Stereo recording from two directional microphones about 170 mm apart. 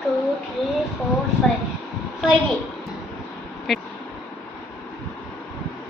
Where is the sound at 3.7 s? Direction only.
Centre (ahead or behind).